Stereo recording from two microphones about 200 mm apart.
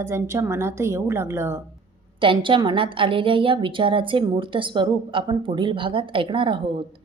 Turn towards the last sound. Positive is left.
turn(degrees=-25)  # may be behind; listen again after turning